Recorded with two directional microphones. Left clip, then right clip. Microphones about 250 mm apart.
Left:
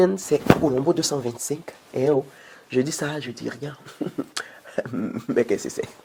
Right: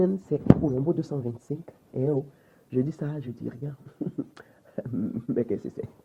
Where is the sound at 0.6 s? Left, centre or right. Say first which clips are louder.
Left 6 dB; left.